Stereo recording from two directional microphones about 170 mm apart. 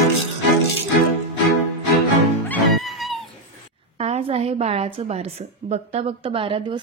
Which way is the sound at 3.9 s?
40° right (ahead or behind).